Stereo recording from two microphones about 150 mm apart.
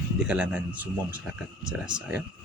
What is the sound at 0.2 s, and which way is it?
Speech, 5° right (ahead or behind).